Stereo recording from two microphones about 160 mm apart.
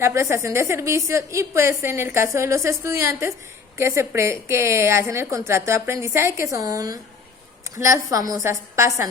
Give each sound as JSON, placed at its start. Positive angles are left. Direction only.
{"t": 0.0, "sound": "a woman's voice", "side_deg": -15}